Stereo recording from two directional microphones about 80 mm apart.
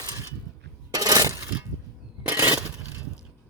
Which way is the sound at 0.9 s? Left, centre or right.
Right.